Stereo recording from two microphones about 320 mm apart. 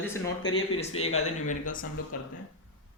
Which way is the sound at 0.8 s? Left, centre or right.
Centre.